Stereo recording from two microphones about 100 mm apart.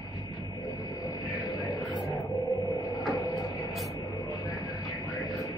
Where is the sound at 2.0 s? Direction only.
Centre (ahead or behind).